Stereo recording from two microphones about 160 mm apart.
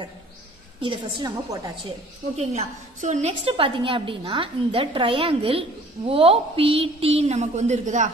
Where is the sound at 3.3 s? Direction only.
35° right (ahead or behind).